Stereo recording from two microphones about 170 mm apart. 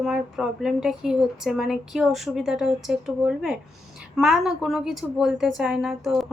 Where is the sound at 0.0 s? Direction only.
5° right (ahead or behind).